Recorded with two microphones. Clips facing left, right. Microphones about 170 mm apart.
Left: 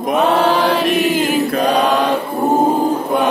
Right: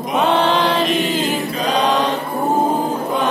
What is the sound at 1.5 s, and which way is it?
Chant, 55° left (ahead or behind).